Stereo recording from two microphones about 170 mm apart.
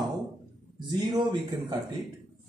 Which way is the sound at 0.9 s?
25° right (ahead or behind).